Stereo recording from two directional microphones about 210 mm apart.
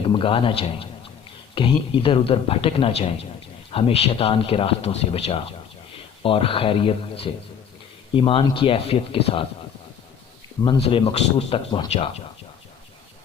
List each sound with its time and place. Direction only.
0.0 s a man's voice: 25° left (ahead or behind)
10.6 s a man's voice: 25° left (ahead or behind)